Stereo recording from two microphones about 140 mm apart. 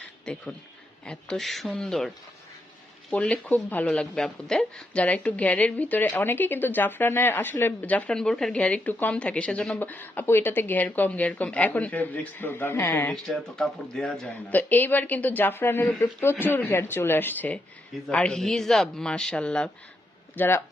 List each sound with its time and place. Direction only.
0.3 s speech: 10° left (ahead or behind)
13.2 s speech: 5° left (ahead or behind)